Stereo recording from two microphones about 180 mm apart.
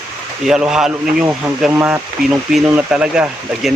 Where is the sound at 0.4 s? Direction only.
5° right (ahead or behind).